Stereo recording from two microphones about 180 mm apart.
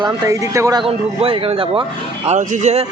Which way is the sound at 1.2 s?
30° right (ahead or behind).